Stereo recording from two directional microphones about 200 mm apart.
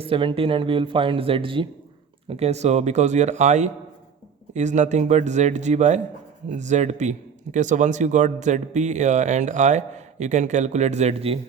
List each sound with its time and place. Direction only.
0.0 s speech: 25° right (ahead or behind)